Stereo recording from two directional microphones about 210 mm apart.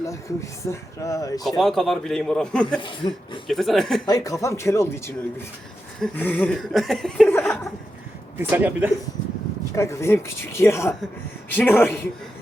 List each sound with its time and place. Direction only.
0.1 s speech: 15° left (ahead or behind)
1.5 s speech: centre (ahead or behind)
2.8 s speech: 25° left (ahead or behind)
3.4 s speech: centre (ahead or behind)
4.0 s speech: 15° left (ahead or behind)
8.4 s a man's voice: 10° right (ahead or behind)
9.7 s speech: 15° left (ahead or behind)